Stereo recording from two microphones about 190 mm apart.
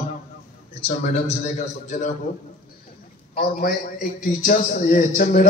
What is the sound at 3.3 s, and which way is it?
A man's voice, 55° left (ahead or behind).